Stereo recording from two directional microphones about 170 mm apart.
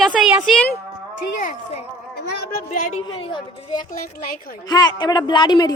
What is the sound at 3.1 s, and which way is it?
Speech, 30° left (ahead or behind).